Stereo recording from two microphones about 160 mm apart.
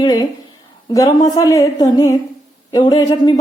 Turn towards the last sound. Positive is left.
turn(degrees=25)  # may be behind; listen again after turning